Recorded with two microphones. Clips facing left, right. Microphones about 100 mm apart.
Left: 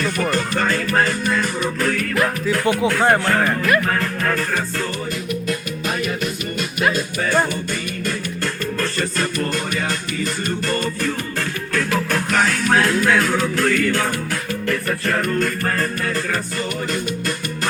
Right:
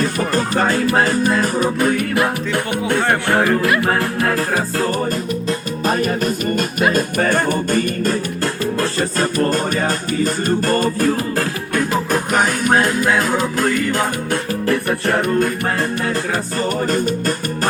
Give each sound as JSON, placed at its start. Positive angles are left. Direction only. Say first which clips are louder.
{"t": 0.0, "sound": "music", "louder": "right 2 dB", "side_deg": -35}
{"t": 1.8, "sound": "music", "louder": "right 3 dB", "side_deg": -15}
{"t": 2.1, "sound": "music", "louder": "right 1 dB", "side_deg": -25}
{"t": 11.7, "sound": "music", "louder": "right 2 dB", "side_deg": -20}
{"t": 14.7, "sound": "music", "louder": "right 4 dB", "side_deg": -30}
{"t": 16.6, "sound": "music", "louder": "right 6 dB", "side_deg": -40}